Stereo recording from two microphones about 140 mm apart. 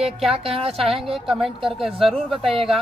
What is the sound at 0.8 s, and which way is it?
Speech, centre (ahead or behind).